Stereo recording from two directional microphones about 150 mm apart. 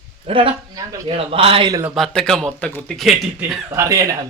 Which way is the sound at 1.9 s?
Centre (ahead or behind).